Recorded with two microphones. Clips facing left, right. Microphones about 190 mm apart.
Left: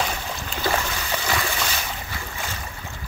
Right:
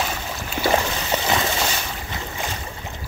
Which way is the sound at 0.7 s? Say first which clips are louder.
Right 5 dB; 25° right (ahead or behind).